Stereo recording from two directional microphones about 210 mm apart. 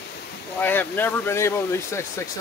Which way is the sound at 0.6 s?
10° left (ahead or behind).